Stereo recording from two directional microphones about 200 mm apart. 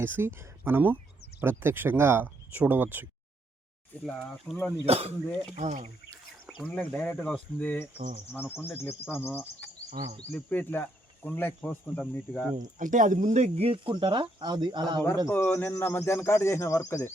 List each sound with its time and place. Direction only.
0.0 s speech: 10° right (ahead or behind)
4.0 s speech: 5° left (ahead or behind)
4.9 s speech: 30° right (ahead or behind)
6.6 s speech: 10° left (ahead or behind)
7.9 s speech: 35° right (ahead or behind)
8.3 s speech: 10° left (ahead or behind)
12.5 s speech: 40° right (ahead or behind); by 15.0 s 20° right (ahead or behind)
15.3 s speech: 10° left (ahead or behind)